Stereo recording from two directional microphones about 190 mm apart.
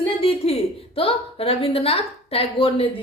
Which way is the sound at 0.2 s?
30° left (ahead or behind).